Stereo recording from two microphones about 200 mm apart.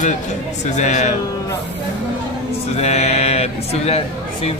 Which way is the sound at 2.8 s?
35° left (ahead or behind).